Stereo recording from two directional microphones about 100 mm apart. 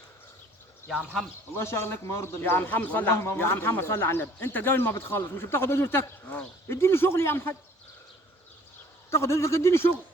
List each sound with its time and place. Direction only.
1.5 s speech: 25° left (ahead or behind)
9.0 s speech: 25° left (ahead or behind)